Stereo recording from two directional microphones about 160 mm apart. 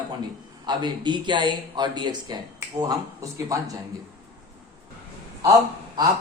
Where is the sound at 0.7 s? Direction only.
30° right (ahead or behind).